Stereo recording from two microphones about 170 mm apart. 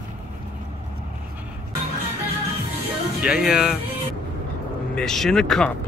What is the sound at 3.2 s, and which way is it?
Speech, 5° right (ahead or behind).